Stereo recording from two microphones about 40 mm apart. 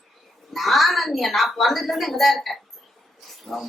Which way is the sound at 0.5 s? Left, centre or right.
Centre.